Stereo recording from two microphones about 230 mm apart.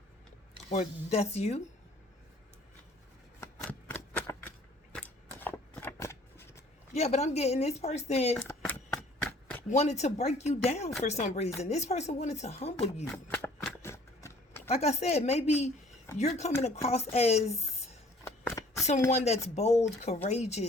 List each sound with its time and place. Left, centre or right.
0.7 s speech: left
3.4 s shuffling cards: centre
4.9 s scissors: centre
6.9 s speech: left
8.4 s chopping: centre
9.6 s speech: left
13.1 s a sound: centre
14.7 s speech: left
18.3 s a sound: centre
19.1 s speech: left